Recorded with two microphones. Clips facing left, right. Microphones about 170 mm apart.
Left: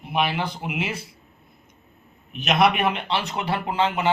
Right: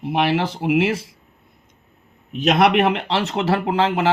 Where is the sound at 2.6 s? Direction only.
85° right.